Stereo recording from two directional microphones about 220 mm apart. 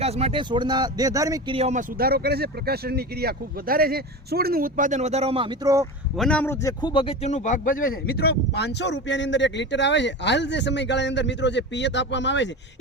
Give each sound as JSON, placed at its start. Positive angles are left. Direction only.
{"t": 0.0, "sound": "speech", "side_deg": -25}
{"t": 1.5, "sound": "speech", "side_deg": -30}
{"t": 2.0, "sound": "speech", "side_deg": -45}
{"t": 6.1, "sound": "a man's voice", "side_deg": 5}